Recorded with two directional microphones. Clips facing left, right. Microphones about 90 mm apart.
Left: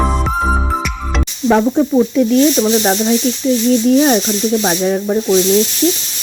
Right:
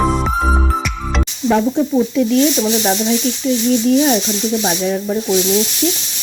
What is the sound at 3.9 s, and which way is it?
Speech, 55° left (ahead or behind).